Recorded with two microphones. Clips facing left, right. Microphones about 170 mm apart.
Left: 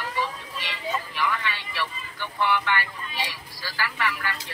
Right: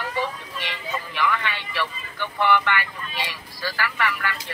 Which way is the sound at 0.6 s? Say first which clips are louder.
Left 1 dB; 60° right (ahead or behind).